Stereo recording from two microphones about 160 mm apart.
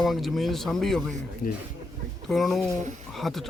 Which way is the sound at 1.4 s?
70° left (ahead or behind).